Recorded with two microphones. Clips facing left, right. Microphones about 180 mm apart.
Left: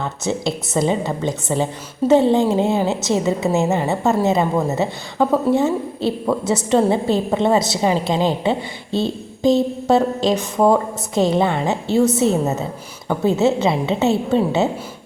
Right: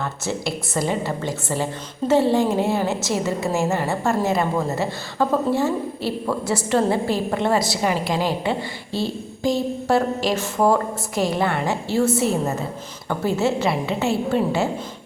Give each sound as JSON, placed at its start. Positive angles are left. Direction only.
{"t": 0.0, "sound": "a woman's voice", "side_deg": 20}